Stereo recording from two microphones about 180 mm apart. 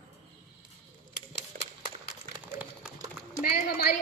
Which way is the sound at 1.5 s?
50° right (ahead or behind).